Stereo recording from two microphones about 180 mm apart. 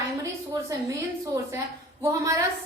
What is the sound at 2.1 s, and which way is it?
Speech, 20° right (ahead or behind).